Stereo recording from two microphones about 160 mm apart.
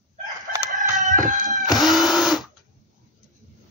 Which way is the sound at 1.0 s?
55° right (ahead or behind).